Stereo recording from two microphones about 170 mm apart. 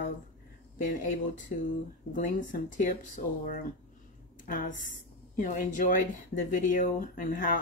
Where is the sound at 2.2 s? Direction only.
50° left (ahead or behind).